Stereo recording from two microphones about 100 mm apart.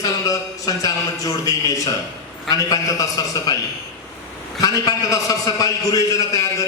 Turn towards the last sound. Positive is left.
turn(degrees=35)  # may be behind; listen again after turning